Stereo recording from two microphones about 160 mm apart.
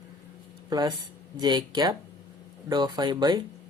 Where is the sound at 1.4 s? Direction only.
25° right (ahead or behind).